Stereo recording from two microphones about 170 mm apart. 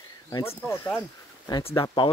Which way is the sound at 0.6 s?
15° left (ahead or behind).